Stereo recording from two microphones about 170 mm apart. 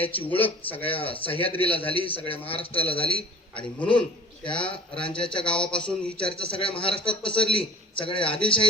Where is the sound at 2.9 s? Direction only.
30° left (ahead or behind).